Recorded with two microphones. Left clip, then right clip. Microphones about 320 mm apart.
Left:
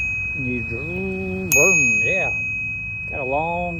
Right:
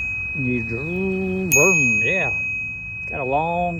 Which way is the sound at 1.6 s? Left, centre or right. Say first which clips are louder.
Left 1 dB; right.